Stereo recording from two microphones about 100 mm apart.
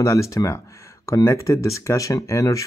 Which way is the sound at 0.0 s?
30° left (ahead or behind).